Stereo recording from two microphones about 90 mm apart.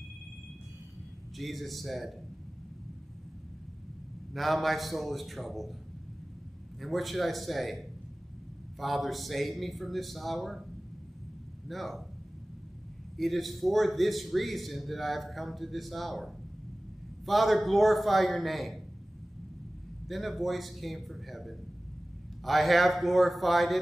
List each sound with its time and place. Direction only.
1.3 s a man's voice: centre (ahead or behind)
4.3 s a man's voice: centre (ahead or behind)
6.8 s a man's voice: centre (ahead or behind)
11.6 s a man's voice: centre (ahead or behind)
13.2 s a man's voice: centre (ahead or behind)
17.3 s a man's voice: centre (ahead or behind)
20.1 s a man's voice: centre (ahead or behind)